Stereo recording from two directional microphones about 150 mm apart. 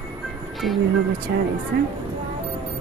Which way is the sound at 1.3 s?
90° right.